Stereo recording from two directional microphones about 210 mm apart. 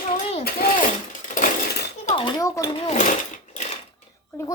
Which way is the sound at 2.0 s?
25° left (ahead or behind).